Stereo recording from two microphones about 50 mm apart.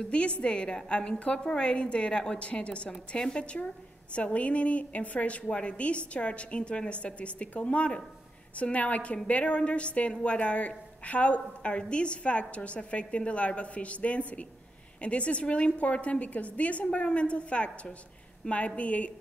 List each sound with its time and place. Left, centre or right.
0.0 s a woman's voice: left